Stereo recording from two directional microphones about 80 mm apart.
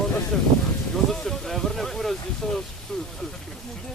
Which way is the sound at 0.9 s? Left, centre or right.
Centre.